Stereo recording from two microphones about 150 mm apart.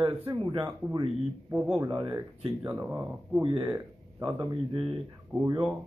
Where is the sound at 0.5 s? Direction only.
30° right (ahead or behind).